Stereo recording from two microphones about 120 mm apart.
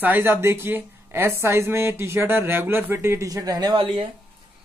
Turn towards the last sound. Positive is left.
turn(degrees=-50)  # may be behind; listen again after turning